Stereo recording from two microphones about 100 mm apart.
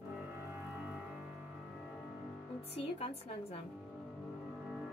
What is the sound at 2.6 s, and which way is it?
Speech, 90° left.